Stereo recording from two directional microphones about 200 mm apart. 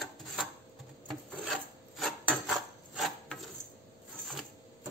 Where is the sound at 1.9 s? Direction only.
Centre (ahead or behind).